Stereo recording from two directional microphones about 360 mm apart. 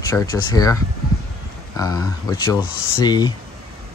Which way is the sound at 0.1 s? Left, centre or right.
Centre.